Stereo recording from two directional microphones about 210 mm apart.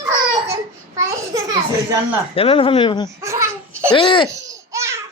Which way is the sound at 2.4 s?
25° left (ahead or behind).